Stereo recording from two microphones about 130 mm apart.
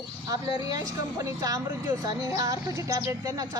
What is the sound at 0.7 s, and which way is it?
Speech, 25° right (ahead or behind).